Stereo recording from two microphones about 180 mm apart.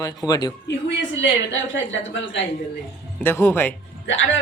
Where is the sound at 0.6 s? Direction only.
90° left.